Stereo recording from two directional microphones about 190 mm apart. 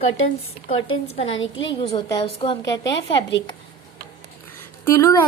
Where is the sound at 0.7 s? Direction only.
90° left.